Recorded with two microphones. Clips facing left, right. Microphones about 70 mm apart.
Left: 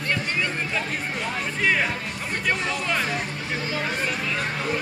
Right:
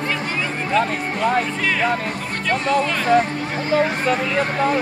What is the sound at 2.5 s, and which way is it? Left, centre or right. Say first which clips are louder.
Speech: right 7 dB; right.